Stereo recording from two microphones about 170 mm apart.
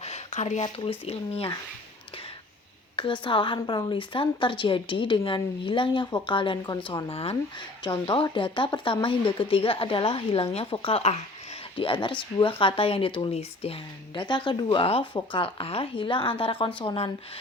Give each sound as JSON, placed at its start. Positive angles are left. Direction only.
{"t": 0.0, "sound": "a sound", "side_deg": 40}
{"t": 0.6, "sound": "speech", "side_deg": 35}
{"t": 2.9, "sound": "a woman's voice", "side_deg": 30}